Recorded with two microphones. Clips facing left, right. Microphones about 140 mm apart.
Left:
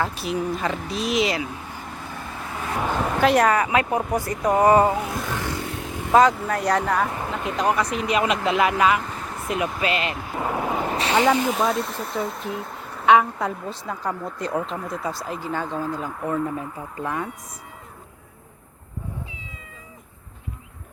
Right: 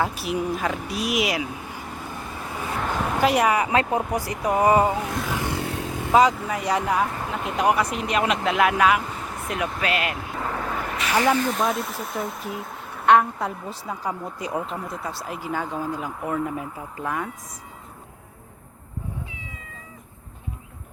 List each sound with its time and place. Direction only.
0.0 s speech: 5° right (ahead or behind)
2.7 s a sound: 5° left (ahead or behind); by 3.7 s 10° right (ahead or behind)
3.7 s speech: 30° right (ahead or behind)
4.3 s speech: 10° right (ahead or behind)
5.3 s vehicle: 15° right (ahead or behind)
6.1 s a woman's voice: 5° right (ahead or behind)
10.3 s vehicle: 15° left (ahead or behind)
10.8 s a sound: 30° left (ahead or behind)
11.3 s speech: 10° left (ahead or behind)
11.6 s a woman's voice: centre (ahead or behind)